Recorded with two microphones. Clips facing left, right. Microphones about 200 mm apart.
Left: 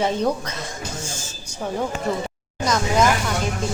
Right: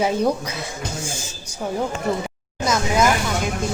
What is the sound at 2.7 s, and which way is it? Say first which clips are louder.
Speech: even; 5° right (ahead or behind).